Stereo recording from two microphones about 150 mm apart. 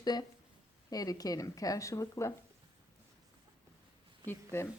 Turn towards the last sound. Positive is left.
turn(degrees=15)  # may be behind; listen again after turning